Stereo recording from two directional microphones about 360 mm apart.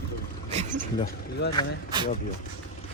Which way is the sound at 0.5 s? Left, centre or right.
Centre.